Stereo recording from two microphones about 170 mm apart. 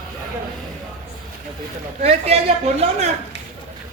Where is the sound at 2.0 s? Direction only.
40° right (ahead or behind).